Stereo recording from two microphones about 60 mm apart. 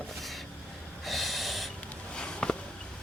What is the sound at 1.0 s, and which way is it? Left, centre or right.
Snort, centre.